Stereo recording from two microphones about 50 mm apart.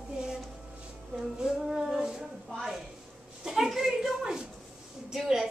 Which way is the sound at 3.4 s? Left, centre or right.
Centre.